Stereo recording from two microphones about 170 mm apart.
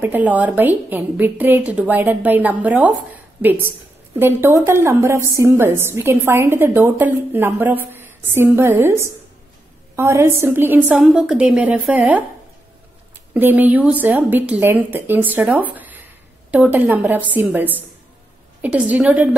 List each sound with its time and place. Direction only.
0.0 s a woman's voice: 10° right (ahead or behind)
13.3 s a woman's voice: 10° right (ahead or behind)